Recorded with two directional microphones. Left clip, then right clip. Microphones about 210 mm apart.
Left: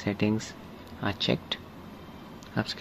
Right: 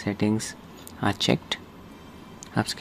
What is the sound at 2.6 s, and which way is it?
Speech, 15° right (ahead or behind).